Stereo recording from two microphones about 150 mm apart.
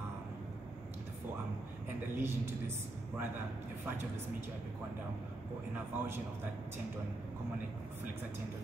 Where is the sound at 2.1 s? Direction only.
15° right (ahead or behind).